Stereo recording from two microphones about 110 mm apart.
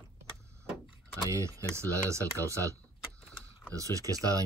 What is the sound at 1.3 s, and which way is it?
Speech, 30° right (ahead or behind).